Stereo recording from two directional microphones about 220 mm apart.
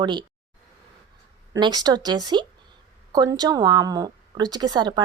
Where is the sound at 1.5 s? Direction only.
20° right (ahead or behind).